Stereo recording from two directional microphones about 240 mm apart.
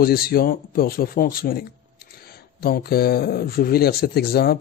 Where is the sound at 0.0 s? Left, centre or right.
Left.